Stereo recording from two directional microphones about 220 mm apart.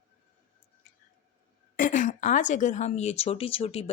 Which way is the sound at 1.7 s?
35° left (ahead or behind).